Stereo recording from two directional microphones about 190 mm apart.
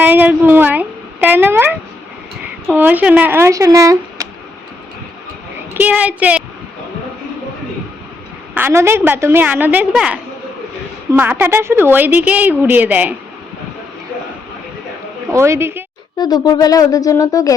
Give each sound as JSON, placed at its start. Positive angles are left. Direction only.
{"t": 0.0, "sound": "speech", "side_deg": -10}
{"t": 5.7, "sound": "speech", "side_deg": -10}
{"t": 8.5, "sound": "speech", "side_deg": -15}
{"t": 15.3, "sound": "speech", "side_deg": -15}
{"t": 16.1, "sound": "speech", "side_deg": 20}